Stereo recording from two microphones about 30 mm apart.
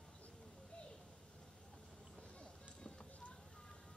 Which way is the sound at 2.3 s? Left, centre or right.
Left.